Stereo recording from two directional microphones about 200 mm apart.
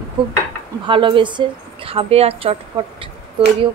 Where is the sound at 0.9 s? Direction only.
25° right (ahead or behind).